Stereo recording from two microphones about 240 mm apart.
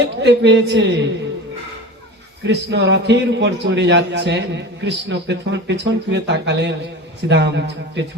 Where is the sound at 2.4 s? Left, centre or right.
Right.